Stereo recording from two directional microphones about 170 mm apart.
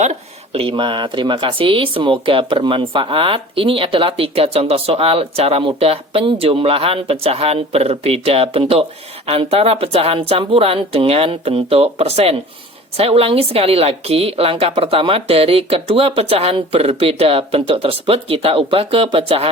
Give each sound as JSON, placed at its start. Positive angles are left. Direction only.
{"t": 0.0, "sound": "speech", "side_deg": -40}